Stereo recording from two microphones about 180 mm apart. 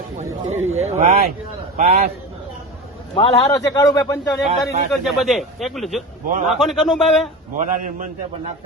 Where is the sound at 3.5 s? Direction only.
20° left (ahead or behind).